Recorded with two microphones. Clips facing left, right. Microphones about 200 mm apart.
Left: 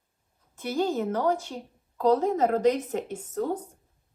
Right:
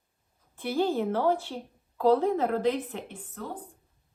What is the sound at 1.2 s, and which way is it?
Speech, centre (ahead or behind).